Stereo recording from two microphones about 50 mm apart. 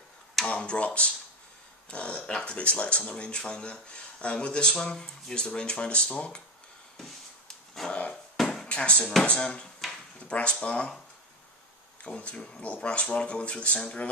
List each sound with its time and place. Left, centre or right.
0.6 s speech: left
7.0 s a sound: centre
7.9 s music: left
8.4 s a sound: centre
8.6 s speech: left
12.0 s speech: left